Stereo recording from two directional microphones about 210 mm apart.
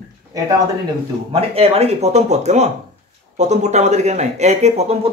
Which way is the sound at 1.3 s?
30° right (ahead or behind).